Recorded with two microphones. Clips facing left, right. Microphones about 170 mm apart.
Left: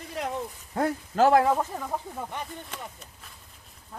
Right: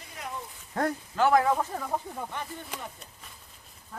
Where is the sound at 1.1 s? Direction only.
40° left (ahead or behind).